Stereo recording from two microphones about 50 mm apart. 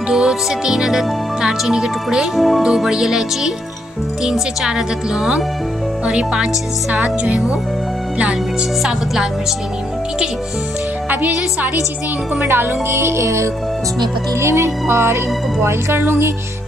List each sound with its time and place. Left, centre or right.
0.1 s speech: centre
2.3 s speech: centre; by 7.5 s right
8.8 s speech: centre
11.1 s speech: right
12.4 s music: right
14.4 s music: right